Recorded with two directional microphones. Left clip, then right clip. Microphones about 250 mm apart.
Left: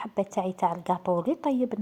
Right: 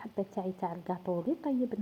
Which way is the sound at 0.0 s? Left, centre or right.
Left.